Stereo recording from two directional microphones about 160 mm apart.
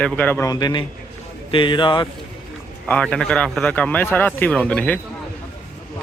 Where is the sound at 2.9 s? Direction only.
5° left (ahead or behind).